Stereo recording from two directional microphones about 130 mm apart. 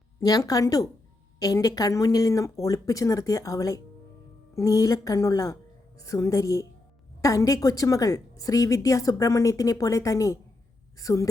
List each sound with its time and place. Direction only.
0.2 s a woman's voice: 30° left (ahead or behind)